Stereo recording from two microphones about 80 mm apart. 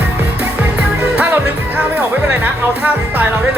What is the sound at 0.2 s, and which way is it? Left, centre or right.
Music, right.